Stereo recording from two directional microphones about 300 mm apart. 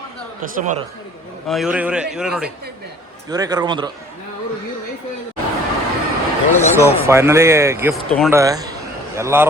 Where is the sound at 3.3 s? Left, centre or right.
Centre.